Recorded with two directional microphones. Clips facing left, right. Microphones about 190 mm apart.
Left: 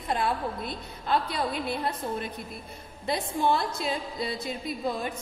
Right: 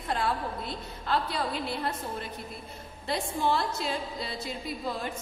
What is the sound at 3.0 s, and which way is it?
Speech, 20° left (ahead or behind).